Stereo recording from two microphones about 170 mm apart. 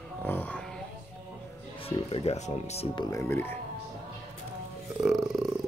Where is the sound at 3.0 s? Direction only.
20° left (ahead or behind).